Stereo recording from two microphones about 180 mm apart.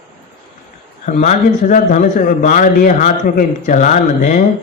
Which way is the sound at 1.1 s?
40° left (ahead or behind).